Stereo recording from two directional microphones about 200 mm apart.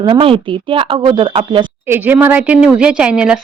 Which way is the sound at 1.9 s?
10° right (ahead or behind).